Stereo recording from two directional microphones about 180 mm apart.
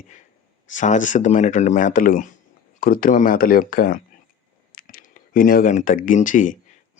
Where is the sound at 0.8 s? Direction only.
45° left (ahead or behind).